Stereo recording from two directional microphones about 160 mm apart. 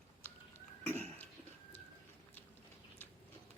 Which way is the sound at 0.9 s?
15° left (ahead or behind).